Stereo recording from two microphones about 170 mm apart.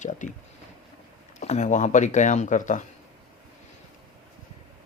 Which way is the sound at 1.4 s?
45° left (ahead or behind).